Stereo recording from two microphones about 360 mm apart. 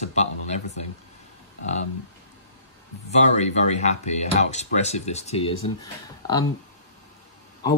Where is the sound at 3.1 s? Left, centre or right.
Centre.